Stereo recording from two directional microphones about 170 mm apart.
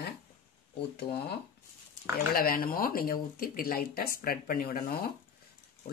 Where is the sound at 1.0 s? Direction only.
70° left (ahead or behind).